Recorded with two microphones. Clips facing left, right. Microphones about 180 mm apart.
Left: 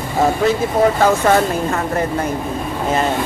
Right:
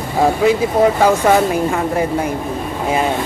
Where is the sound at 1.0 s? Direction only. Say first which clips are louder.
Right 1 dB; 10° right (ahead or behind).